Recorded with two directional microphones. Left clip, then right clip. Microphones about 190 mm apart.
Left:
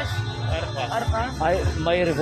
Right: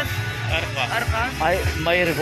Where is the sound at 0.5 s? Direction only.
20° left (ahead or behind).